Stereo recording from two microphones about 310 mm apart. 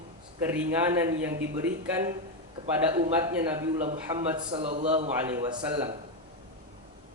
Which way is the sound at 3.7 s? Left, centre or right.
Right.